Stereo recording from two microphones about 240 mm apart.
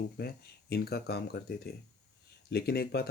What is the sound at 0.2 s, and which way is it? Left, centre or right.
Speech, left.